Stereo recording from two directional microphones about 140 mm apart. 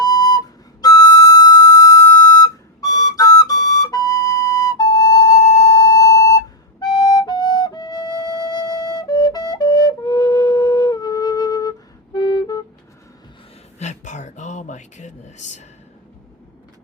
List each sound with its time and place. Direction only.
0.0 s flute: 25° left (ahead or behind)
12.1 s music: 30° left (ahead or behind)
13.7 s a sound: 55° left (ahead or behind)